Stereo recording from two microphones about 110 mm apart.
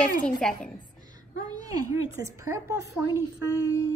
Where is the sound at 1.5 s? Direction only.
35° right (ahead or behind).